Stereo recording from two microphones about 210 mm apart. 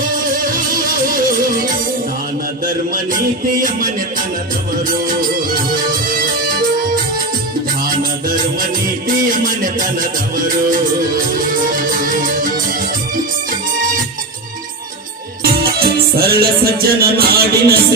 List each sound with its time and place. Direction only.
0.4 s music: 40° right (ahead or behind)
4.8 s music: 40° right (ahead or behind)
9.3 s music: 40° right (ahead or behind)
15.4 s music: 45° right (ahead or behind)